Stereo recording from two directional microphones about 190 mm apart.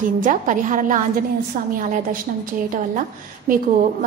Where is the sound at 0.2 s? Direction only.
45° right (ahead or behind).